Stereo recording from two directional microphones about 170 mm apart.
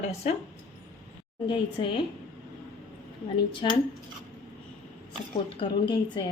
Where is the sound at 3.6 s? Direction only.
30° left (ahead or behind).